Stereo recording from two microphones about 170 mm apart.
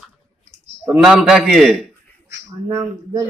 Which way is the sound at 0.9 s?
5° right (ahead or behind).